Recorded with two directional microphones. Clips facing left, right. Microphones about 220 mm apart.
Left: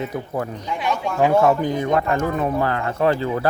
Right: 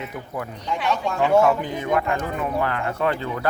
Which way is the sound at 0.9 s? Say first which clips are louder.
Left 3 dB; 10° left (ahead or behind).